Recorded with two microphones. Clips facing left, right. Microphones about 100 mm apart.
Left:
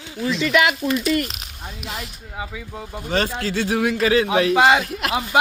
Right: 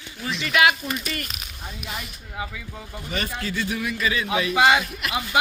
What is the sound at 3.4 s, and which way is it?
Speech, 85° left.